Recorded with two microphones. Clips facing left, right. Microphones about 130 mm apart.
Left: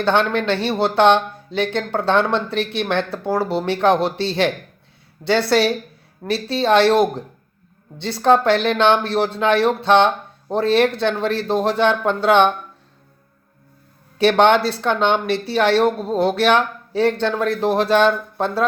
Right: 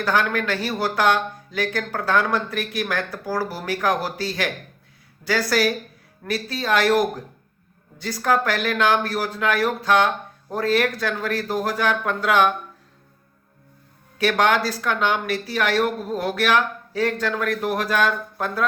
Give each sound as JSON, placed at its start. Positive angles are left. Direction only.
{"t": 0.0, "sound": "speech", "side_deg": 30}
{"t": 14.2, "sound": "speech", "side_deg": 30}